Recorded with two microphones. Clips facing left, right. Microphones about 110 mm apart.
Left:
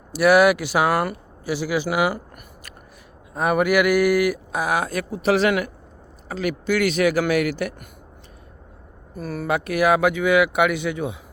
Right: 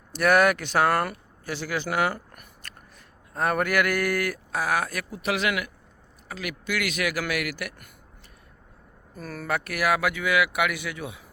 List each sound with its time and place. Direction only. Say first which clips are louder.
0.1 s speech: left 5 dB; 5° left (ahead or behind); by 7.9 s 25° left (ahead or behind)
9.1 s speech: left 6 dB; 10° left (ahead or behind)